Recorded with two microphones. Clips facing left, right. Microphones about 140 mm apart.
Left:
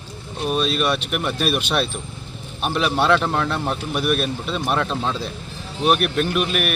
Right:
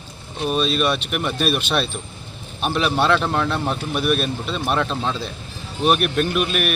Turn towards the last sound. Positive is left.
turn(degrees=0)  # may be behind; listen again after turning